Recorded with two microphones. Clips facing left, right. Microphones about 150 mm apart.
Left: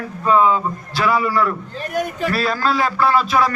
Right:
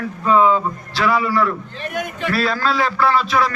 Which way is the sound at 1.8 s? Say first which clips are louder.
Left 3 dB; 40° left (ahead or behind).